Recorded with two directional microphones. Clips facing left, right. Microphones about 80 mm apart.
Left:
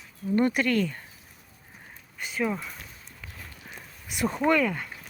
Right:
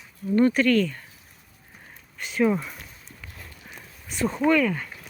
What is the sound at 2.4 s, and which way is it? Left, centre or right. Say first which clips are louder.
Speech: right 7 dB; centre.